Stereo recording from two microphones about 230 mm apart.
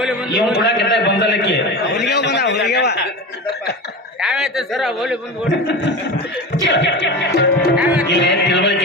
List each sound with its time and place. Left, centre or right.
0.0 s a sound: centre
0.5 s a man's voice: left
4.2 s speech: centre
5.5 s a man's voice: left
6.7 s music: left
7.8 s music: centre
8.1 s a sound: left